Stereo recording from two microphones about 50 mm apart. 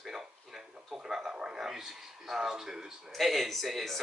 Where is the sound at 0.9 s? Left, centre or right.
Centre.